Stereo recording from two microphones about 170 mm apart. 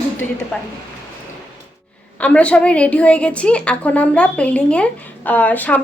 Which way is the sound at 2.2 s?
10° left (ahead or behind).